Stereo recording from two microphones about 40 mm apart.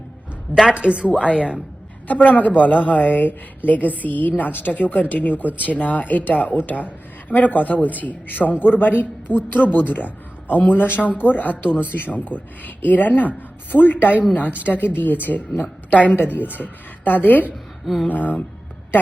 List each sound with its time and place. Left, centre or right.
0.6 s a woman's voice: right
2.0 s a woman's voice: left
17.8 s a sound: centre
18.1 s speech: left